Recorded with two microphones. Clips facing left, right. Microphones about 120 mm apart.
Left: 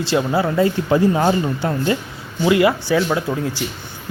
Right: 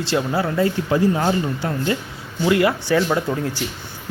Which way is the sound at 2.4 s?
10° left (ahead or behind).